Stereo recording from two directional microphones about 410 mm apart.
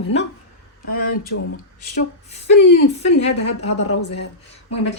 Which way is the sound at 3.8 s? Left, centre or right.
Left.